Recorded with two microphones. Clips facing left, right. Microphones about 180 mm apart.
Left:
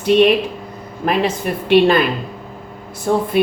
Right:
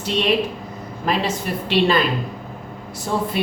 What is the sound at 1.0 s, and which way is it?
Speech, 55° left (ahead or behind).